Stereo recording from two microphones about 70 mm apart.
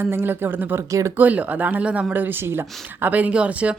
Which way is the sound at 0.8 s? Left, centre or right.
Right.